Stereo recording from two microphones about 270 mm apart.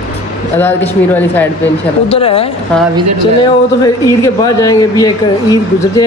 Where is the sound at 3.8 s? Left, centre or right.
Centre.